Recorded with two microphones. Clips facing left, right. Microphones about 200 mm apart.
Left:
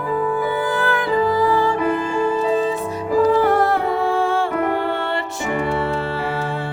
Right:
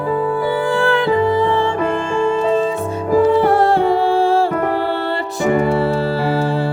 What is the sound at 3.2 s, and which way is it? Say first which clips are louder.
Music: right 2 dB; 30° right (ahead or behind).